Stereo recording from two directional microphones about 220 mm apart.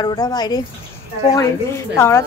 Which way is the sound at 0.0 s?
20° left (ahead or behind).